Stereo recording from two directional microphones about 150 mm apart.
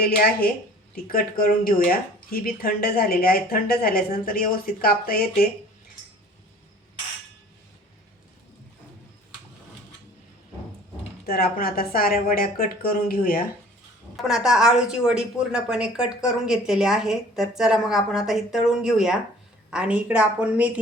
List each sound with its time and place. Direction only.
0.0 s speech: 90° left
1.0 s speech: 70° left (ahead or behind); by 5.5 s 85° left
11.3 s speech: 85° left
14.2 s a woman's voice: 5° right (ahead or behind)